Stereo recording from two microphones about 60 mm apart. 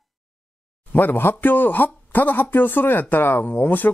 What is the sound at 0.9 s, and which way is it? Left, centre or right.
Speech, left.